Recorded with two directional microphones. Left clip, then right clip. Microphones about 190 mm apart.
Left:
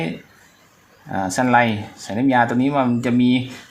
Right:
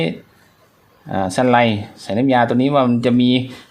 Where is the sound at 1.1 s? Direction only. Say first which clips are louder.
Right 2 dB; 60° right (ahead or behind).